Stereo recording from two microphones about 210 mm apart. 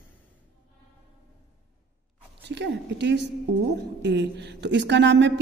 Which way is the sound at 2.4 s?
55° right (ahead or behind).